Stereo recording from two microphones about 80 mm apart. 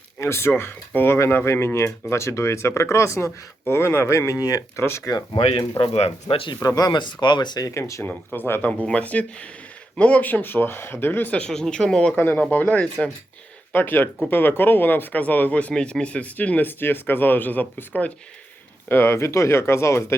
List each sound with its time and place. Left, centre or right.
0.2 s speech: left
4.4 s speech: left
4.8 s speech: left
5.8 s speech: left
6.6 s speech: left
7.7 s speech: left
8.0 s speech: left; by 12.1 s centre
12.1 s speech: left